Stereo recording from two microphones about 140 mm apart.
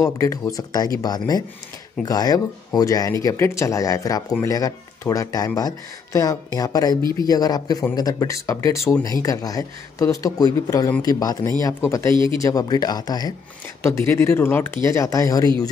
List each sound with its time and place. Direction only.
0.0 s speech: 20° left (ahead or behind)
12.1 s speech: 35° right (ahead or behind)
12.4 s speech: 25° left (ahead or behind)